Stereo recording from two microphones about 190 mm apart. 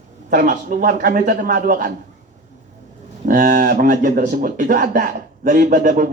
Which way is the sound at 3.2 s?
45° right (ahead or behind).